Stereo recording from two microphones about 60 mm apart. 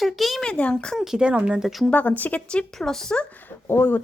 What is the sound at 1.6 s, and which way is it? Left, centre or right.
Speech, centre.